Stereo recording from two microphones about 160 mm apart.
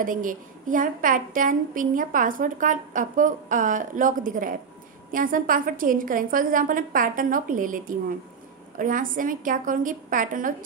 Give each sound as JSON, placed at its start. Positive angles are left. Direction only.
{"t": 0.0, "sound": "a woman's voice", "side_deg": -55}